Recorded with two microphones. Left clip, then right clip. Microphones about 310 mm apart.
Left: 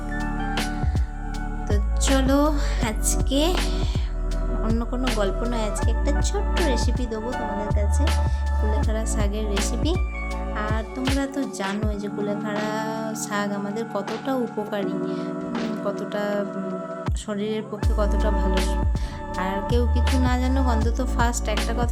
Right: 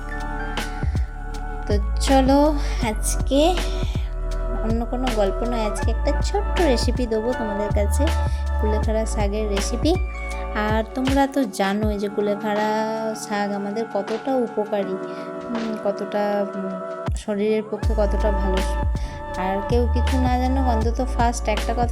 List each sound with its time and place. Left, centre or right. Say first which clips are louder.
1.6 s music: right 3 dB; centre
4.7 s music: right 3 dB; centre
6.7 s music: right 5 dB; centre
10.5 s music: right 7 dB; centre
19.4 s music: right 3 dB; centre